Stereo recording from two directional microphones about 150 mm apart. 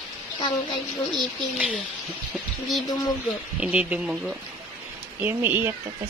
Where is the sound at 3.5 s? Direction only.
10° right (ahead or behind).